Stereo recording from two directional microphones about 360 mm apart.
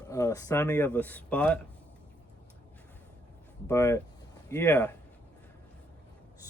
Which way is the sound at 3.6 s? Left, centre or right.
Centre.